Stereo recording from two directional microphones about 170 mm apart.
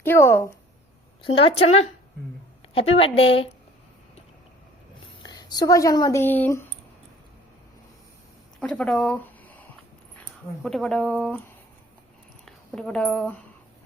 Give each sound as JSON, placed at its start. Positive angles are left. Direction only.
{"t": 0.0, "sound": "speech", "side_deg": 15}
{"t": 1.2, "sound": "a woman's voice", "side_deg": 35}
{"t": 5.2, "sound": "speech", "side_deg": 25}
{"t": 8.6, "sound": "a sound", "side_deg": 5}
{"t": 10.6, "sound": "speech", "side_deg": 0}
{"t": 12.5, "sound": "speech", "side_deg": 5}